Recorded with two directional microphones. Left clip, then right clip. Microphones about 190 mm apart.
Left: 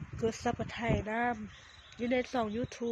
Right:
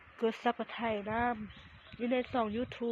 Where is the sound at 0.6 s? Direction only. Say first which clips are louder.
Left 1 dB; 15° left (ahead or behind).